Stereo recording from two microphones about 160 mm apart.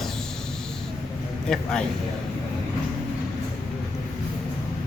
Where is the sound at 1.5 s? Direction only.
5° left (ahead or behind).